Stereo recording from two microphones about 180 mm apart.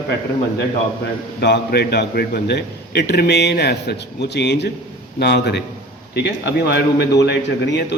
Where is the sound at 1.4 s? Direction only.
65° left (ahead or behind).